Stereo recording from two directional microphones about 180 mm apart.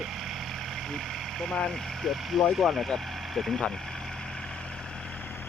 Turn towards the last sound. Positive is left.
turn(degrees=0)  # may be behind; listen again after turning